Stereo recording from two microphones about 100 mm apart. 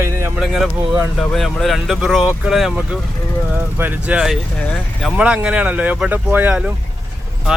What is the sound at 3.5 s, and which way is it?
Speech, 20° right (ahead or behind).